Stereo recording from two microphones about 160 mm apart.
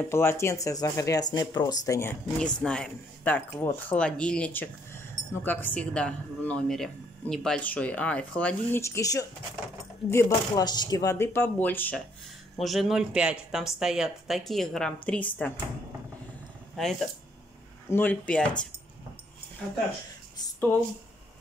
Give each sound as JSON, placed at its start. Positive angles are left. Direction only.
{"t": 0.0, "sound": "speech", "side_deg": 15}
{"t": 2.3, "sound": "speech", "side_deg": 5}
{"t": 12.5, "sound": "speech", "side_deg": 0}
{"t": 16.7, "sound": "speech", "side_deg": 0}
{"t": 17.8, "sound": "speech", "side_deg": 10}